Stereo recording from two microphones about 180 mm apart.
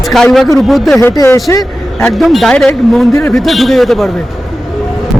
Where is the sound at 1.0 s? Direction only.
15° left (ahead or behind).